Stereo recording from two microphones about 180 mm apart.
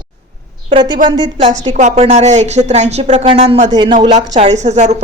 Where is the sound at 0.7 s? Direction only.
30° right (ahead or behind).